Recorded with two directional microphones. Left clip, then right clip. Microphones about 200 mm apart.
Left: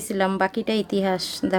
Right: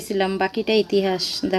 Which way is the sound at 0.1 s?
25° left (ahead or behind).